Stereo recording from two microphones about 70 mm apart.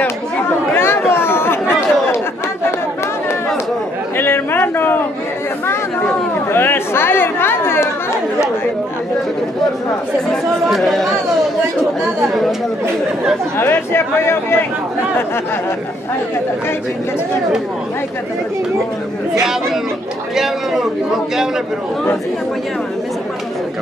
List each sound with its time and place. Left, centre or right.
0.7 s chatter: left
4.2 s a sound: left
6.5 s chatter: left
10.8 s a man's voice: centre
13.6 s speech: left
20.3 s a man's voice: centre